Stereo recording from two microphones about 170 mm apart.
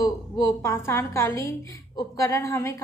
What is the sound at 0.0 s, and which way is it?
A woman's voice, 20° left (ahead or behind).